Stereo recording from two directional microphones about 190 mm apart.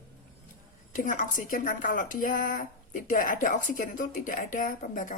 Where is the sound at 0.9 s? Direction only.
45° left (ahead or behind).